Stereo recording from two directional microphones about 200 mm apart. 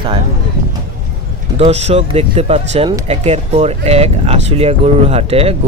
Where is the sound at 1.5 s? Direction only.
30° right (ahead or behind).